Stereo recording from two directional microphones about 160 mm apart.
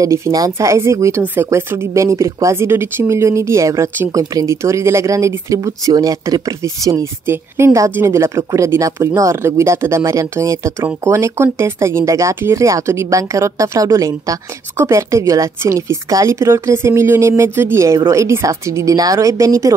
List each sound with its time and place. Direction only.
0.0 s speech: 20° right (ahead or behind)